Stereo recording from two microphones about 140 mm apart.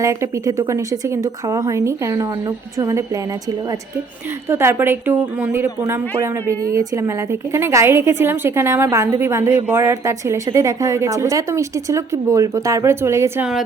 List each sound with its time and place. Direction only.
0.0 s a woman's voice: 20° right (ahead or behind)
4.4 s a woman's voice: 15° right (ahead or behind)